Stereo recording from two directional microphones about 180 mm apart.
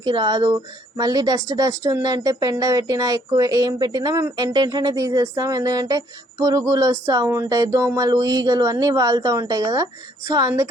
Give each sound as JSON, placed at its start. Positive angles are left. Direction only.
{"t": 0.0, "sound": "a woman's voice", "side_deg": -25}